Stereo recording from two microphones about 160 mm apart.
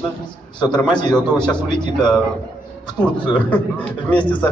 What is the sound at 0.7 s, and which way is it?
A man's voice, 5° left (ahead or behind).